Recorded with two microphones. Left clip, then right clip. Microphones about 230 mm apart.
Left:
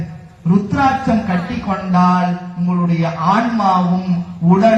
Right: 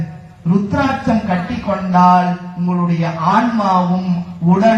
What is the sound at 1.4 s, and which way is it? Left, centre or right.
A man's voice, left.